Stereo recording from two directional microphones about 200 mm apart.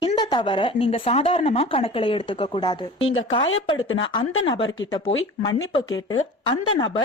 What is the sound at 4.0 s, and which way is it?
Speech, 25° left (ahead or behind).